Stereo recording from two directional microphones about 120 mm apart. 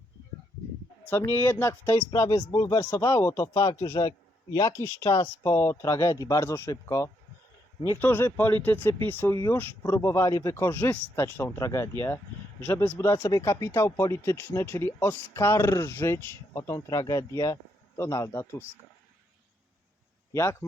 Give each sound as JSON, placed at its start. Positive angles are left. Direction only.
{"t": 1.0, "sound": "speech", "side_deg": 20}
{"t": 20.3, "sound": "speech", "side_deg": 20}